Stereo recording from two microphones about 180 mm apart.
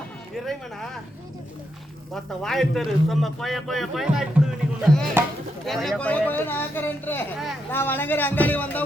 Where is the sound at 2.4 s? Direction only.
Centre (ahead or behind).